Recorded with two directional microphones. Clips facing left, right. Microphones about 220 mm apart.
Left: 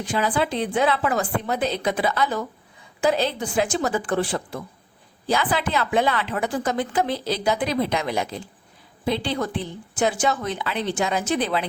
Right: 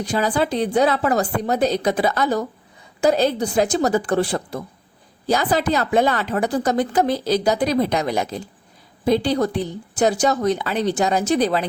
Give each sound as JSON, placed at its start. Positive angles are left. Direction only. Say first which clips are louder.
{"t": 0.0, "sound": "speech", "louder": "right 3 dB", "side_deg": -40}